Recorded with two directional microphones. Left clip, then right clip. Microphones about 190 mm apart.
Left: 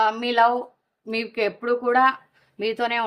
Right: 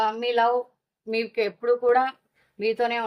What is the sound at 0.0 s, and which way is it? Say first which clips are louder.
A woman's voice: left 3 dB; 40° left (ahead or behind).